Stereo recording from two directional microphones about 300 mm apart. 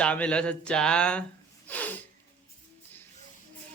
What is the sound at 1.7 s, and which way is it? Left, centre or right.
Snort, centre.